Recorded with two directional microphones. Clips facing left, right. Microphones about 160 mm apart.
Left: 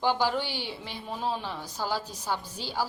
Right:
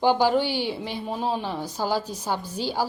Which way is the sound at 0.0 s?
15° right (ahead or behind).